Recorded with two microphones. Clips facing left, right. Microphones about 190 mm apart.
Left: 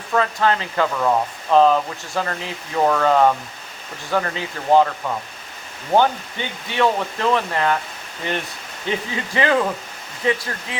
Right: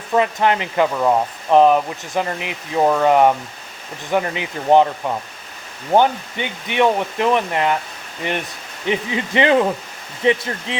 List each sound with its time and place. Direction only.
0.1 s speech: 20° right (ahead or behind)